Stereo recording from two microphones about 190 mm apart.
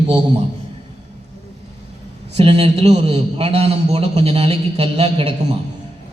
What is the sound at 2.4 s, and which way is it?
A man's voice, 30° right (ahead or behind).